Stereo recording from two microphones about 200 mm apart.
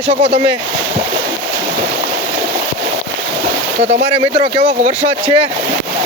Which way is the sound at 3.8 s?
35° right (ahead or behind).